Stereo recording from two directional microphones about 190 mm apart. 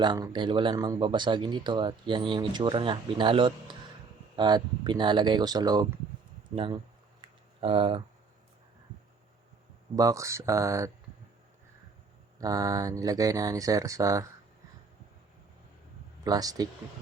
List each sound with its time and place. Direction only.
0.0 s speech: 25° right (ahead or behind)
7.2 s a sound: 25° right (ahead or behind)
9.9 s speech: 20° right (ahead or behind)
12.4 s speech: 20° right (ahead or behind)
16.2 s speech: 20° right (ahead or behind)